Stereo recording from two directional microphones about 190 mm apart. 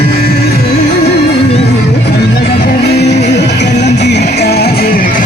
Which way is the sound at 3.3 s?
65° left (ahead or behind).